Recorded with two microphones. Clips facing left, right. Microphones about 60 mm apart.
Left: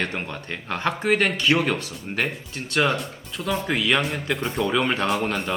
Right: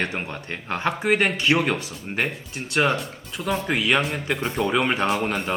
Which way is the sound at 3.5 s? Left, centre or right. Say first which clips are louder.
Even; centre.